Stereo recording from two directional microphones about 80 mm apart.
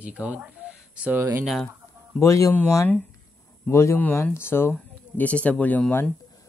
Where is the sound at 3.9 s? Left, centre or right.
Left.